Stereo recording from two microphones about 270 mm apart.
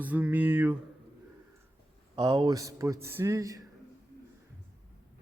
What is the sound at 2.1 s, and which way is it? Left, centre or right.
Speech, centre.